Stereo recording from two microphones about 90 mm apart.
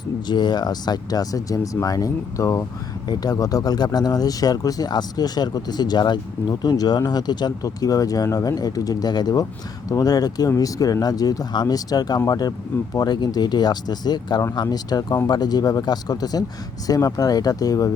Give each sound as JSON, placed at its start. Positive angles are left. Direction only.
{"t": 0.3, "sound": "speech", "side_deg": 55}